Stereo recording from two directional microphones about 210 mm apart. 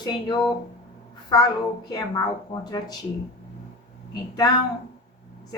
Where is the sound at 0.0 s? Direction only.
20° left (ahead or behind).